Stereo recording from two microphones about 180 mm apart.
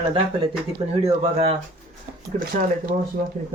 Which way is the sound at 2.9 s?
50° right (ahead or behind).